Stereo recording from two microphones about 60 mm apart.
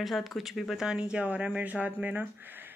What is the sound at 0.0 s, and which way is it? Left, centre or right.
Speech, centre.